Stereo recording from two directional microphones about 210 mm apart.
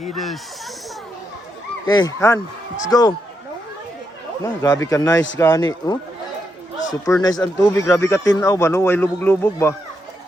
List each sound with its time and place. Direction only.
0.0 s speech: centre (ahead or behind)
1.9 s a man's voice: 20° left (ahead or behind)
4.6 s a man's voice: 15° left (ahead or behind)
7.0 s a man's voice: 15° left (ahead or behind)